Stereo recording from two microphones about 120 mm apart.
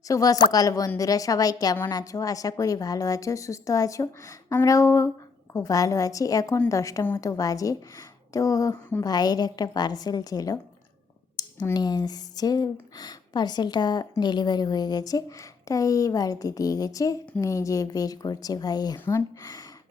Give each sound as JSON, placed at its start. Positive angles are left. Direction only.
{"t": 0.1, "sound": "a woman's voice", "side_deg": 30}
{"t": 11.4, "sound": "a sound", "side_deg": 35}
{"t": 11.7, "sound": "a woman's voice", "side_deg": 35}
{"t": 19.0, "sound": "a woman's voice", "side_deg": 20}